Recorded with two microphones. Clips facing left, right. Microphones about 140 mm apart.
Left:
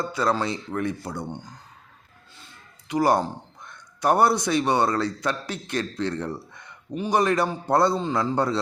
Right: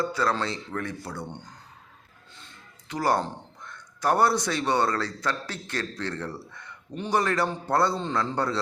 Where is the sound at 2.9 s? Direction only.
15° left (ahead or behind).